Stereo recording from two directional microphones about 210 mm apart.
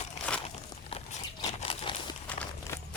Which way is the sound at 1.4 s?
30° left (ahead or behind).